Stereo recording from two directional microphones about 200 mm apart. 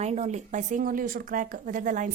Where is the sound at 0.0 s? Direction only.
35° right (ahead or behind).